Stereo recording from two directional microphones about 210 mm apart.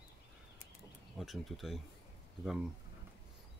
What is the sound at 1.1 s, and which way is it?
Speech, centre (ahead or behind).